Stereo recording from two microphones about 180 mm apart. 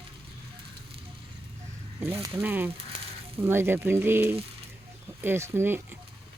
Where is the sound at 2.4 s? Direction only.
10° right (ahead or behind).